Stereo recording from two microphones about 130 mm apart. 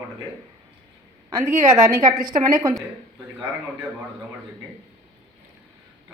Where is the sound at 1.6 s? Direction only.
25° right (ahead or behind).